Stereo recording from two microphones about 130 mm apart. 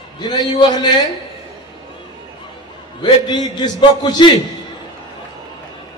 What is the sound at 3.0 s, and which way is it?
A man's voice, 35° left (ahead or behind).